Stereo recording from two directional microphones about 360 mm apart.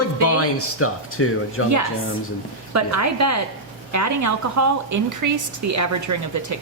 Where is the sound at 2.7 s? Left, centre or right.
Right.